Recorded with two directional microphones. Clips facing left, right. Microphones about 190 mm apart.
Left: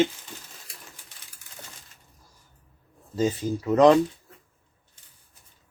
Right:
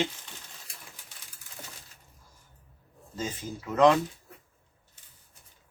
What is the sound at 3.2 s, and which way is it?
Speech, 35° left (ahead or behind).